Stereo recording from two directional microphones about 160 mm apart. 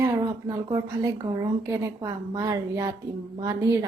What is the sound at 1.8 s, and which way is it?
A woman's voice, 25° right (ahead or behind).